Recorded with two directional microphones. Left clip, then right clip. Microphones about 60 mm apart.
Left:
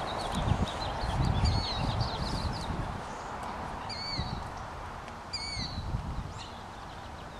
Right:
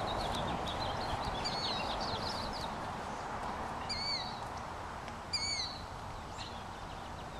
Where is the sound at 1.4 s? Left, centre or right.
Right.